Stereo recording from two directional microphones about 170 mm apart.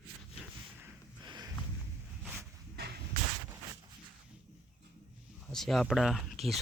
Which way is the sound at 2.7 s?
70° right (ahead or behind).